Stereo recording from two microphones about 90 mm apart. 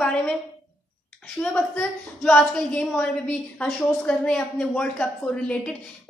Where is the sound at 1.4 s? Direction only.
10° left (ahead or behind).